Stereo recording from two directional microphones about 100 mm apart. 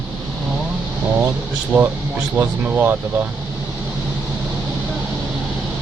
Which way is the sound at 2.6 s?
15° right (ahead or behind).